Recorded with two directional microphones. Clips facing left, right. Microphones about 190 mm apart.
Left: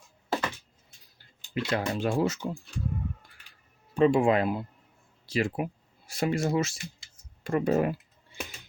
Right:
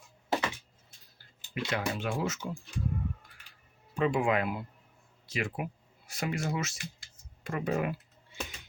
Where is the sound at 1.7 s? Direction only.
35° left (ahead or behind).